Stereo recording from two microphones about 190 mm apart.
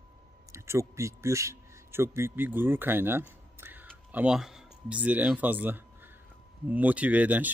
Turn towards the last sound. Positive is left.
turn(degrees=-10)  # may be behind; listen again after turning